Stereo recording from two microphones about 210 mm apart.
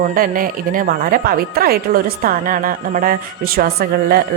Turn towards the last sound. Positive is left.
turn(degrees=-45)  # may be behind; listen again after turning